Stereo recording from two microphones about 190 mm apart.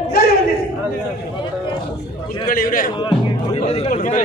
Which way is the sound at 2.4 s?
45° left (ahead or behind).